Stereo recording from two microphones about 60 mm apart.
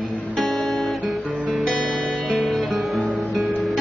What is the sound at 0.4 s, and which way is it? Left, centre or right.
Guitar, centre.